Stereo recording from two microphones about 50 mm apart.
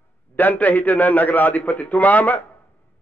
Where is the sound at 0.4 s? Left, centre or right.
Left.